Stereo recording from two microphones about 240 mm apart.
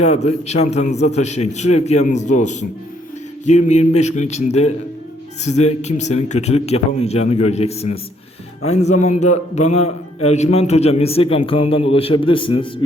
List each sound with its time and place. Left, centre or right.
0.0 s a man's voice: left